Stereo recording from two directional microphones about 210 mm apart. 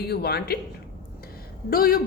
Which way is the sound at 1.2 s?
45° left (ahead or behind).